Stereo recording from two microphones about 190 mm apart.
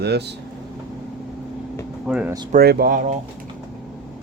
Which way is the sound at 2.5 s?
55° right (ahead or behind).